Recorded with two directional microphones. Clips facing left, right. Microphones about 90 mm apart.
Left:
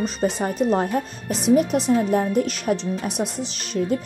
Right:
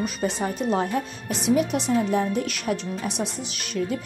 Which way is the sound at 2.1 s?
40° left (ahead or behind).